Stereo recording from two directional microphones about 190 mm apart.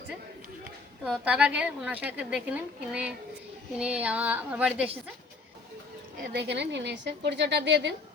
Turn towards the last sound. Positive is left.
turn(degrees=-65)  # may be behind; listen again after turning